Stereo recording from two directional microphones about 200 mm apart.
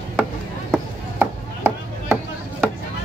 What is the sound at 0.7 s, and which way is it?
Chop, 10° right (ahead or behind).